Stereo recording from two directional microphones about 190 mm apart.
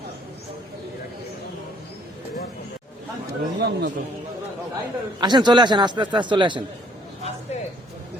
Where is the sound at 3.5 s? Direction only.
55° right (ahead or behind).